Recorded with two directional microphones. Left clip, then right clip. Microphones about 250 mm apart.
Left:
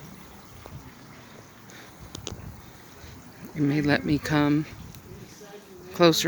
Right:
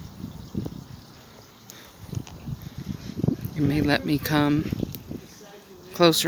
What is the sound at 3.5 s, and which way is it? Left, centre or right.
Speech, centre.